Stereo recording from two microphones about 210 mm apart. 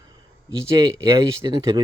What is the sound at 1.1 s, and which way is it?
Speech, 15° right (ahead or behind).